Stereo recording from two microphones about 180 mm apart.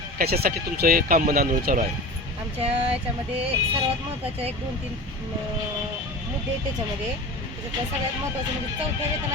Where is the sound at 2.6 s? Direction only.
35° right (ahead or behind).